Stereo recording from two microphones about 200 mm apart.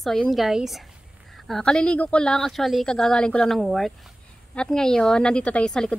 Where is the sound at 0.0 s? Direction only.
Centre (ahead or behind).